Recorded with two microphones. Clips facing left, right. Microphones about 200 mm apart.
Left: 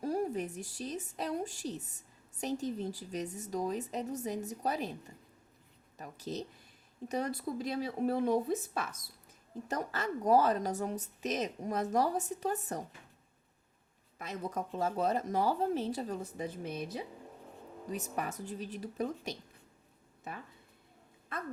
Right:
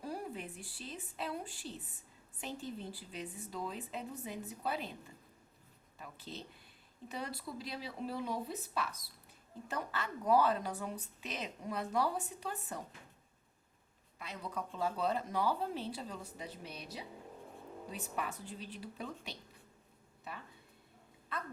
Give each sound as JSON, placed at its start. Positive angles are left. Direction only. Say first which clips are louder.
{"t": 0.0, "sound": "a woman's voice", "louder": "left 9 dB", "side_deg": 45}
{"t": 6.0, "sound": "a woman's voice", "louder": "left 8 dB", "side_deg": 40}
{"t": 14.2, "sound": "speech", "louder": "left 5 dB", "side_deg": 45}